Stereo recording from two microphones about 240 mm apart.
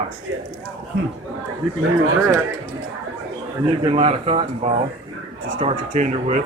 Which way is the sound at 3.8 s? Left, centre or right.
Right.